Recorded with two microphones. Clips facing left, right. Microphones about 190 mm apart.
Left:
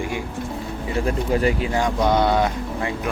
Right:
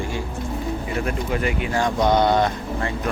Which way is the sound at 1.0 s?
30° left (ahead or behind).